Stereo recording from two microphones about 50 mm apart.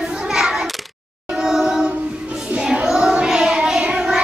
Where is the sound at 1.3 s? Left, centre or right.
Centre.